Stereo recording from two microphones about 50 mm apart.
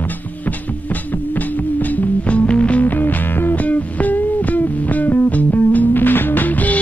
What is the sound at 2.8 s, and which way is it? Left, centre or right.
Music, left.